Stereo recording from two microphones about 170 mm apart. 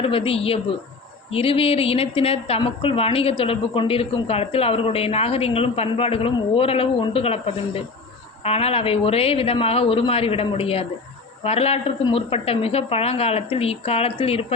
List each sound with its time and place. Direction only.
0.0 s speech: 35° left (ahead or behind)